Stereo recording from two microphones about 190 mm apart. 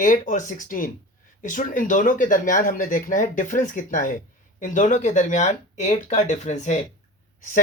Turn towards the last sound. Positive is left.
turn(degrees=45)  # may be behind; listen again after turning